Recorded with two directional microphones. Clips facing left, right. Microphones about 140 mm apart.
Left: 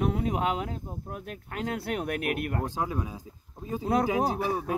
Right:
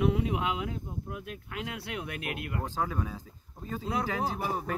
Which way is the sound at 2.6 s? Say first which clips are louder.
Left 2 dB; 15° left (ahead or behind).